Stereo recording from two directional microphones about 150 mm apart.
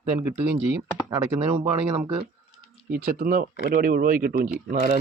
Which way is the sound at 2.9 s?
80° right.